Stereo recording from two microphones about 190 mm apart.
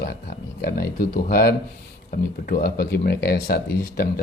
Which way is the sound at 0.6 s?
50° left (ahead or behind).